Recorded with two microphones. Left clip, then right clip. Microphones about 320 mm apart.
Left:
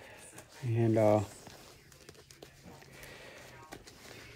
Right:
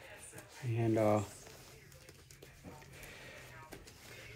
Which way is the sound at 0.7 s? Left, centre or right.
Left.